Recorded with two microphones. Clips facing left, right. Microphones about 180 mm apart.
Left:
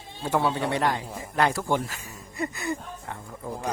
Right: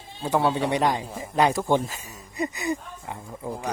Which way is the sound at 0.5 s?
15° right (ahead or behind).